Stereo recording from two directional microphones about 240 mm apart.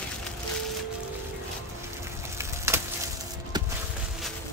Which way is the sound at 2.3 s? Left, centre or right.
Centre.